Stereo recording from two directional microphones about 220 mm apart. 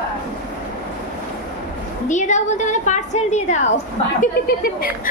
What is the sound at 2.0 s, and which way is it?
A woman's voice, 35° left (ahead or behind).